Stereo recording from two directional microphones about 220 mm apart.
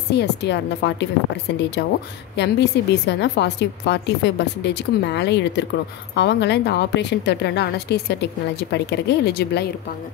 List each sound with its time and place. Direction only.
0.1 s a woman's voice: 50° left (ahead or behind)